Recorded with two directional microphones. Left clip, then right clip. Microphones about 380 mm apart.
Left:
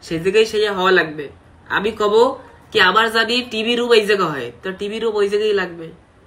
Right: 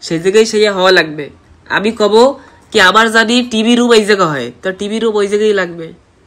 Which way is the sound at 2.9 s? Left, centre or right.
Centre.